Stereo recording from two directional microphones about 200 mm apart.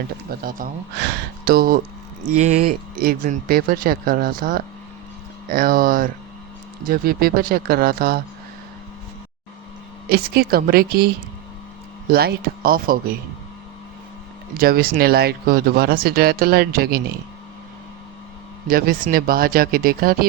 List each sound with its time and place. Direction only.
0.3 s speech: 45° right (ahead or behind)
2.3 s speech: 35° right (ahead or behind)
2.6 s speech: 50° right (ahead or behind)
10.1 s speech: 50° right (ahead or behind)
12.1 s speech: 50° right (ahead or behind)
14.6 s speech: 50° right (ahead or behind)
18.7 s speech: 45° right (ahead or behind)